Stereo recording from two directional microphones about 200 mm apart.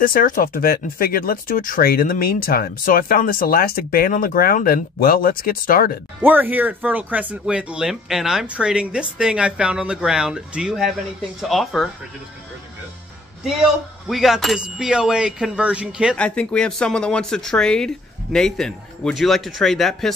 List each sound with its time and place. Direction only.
0.0 s speech: 45° left (ahead or behind)
6.2 s speech: 10° right (ahead or behind)
14.0 s speech: centre (ahead or behind)
16.2 s speech: 5° left (ahead or behind)